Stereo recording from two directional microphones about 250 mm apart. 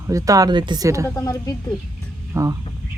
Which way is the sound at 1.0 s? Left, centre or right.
Centre.